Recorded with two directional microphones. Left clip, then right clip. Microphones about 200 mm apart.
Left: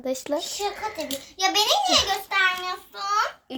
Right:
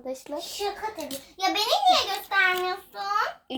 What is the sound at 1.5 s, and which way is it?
Speech, 55° left (ahead or behind).